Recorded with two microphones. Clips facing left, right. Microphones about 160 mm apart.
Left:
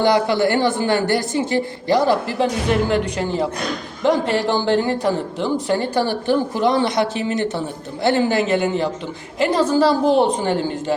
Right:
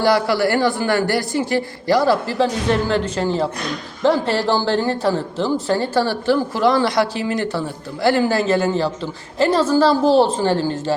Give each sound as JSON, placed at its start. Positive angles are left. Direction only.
{"t": 0.0, "sound": "a woman's voice", "side_deg": 20}